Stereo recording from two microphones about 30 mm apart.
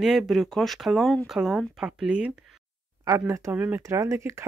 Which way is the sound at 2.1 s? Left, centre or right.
Right.